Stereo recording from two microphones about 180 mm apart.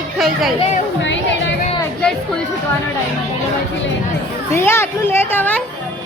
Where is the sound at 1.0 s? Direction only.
90° left.